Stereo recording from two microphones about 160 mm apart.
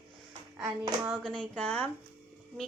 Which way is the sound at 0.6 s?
10° right (ahead or behind).